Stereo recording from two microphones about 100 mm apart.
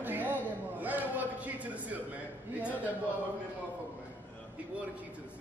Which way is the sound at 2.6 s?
15° right (ahead or behind).